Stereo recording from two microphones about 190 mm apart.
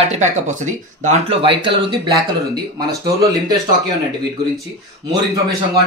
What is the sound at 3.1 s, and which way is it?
Speech, 15° right (ahead or behind).